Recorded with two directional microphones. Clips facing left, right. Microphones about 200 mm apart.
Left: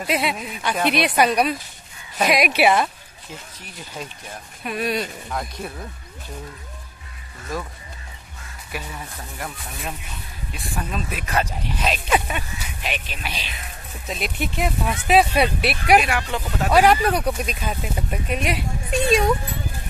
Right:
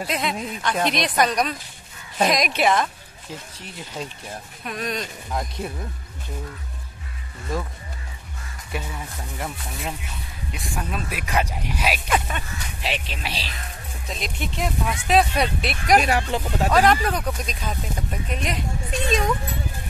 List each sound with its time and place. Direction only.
0.0 s speech: 10° left (ahead or behind)
3.6 s speech: 25° right (ahead or behind)
4.6 s speech: 5° left (ahead or behind)
8.7 s speech: 25° right (ahead or behind)
10.7 s speech: 5° right (ahead or behind)
12.1 s speech: 10° left (ahead or behind)
12.8 s speech: 25° right (ahead or behind)
14.0 s speech: 5° left (ahead or behind)
16.0 s speech: 35° right (ahead or behind)
16.7 s speech: 10° left (ahead or behind)